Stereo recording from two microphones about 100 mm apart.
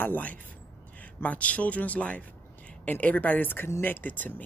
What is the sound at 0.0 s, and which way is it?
Speech, 15° left (ahead or behind).